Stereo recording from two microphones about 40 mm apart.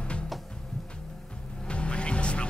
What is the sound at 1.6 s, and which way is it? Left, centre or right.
Music, left.